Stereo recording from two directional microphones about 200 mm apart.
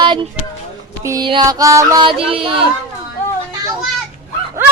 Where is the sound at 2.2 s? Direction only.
30° right (ahead or behind).